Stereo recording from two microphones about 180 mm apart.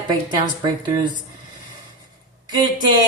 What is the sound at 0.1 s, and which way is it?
A woman's voice, 25° right (ahead or behind).